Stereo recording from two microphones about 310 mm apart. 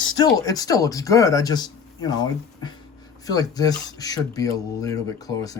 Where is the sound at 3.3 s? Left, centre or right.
Centre.